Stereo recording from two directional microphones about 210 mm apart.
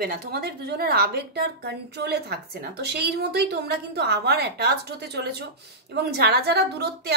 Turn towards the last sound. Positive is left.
turn(degrees=-50)  # may be behind; listen again after turning